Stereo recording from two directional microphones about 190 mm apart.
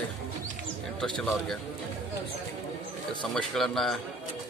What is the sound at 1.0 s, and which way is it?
Speech, 5° left (ahead or behind).